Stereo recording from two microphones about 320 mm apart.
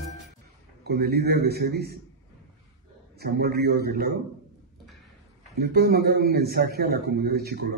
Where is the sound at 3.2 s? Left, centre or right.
Right.